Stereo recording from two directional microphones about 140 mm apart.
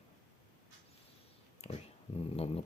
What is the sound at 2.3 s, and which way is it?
Speech, 45° left (ahead or behind).